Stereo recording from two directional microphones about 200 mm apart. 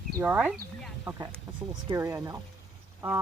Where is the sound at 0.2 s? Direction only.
10° right (ahead or behind).